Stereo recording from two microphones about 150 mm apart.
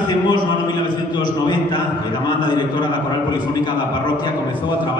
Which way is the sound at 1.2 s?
30° left (ahead or behind).